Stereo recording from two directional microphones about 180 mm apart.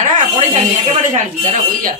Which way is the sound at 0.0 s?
35° right (ahead or behind).